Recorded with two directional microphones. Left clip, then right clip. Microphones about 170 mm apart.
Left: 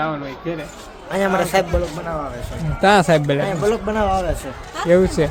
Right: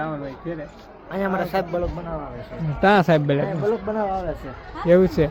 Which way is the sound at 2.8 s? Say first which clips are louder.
Left 3 dB; centre (ahead or behind).